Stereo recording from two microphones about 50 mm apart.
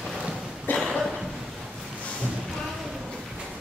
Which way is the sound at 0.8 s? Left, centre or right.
Centre.